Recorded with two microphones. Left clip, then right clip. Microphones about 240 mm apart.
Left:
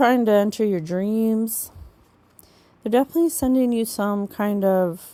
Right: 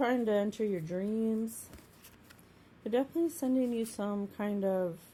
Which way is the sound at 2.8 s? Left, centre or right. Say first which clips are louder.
Left 12 dB; left.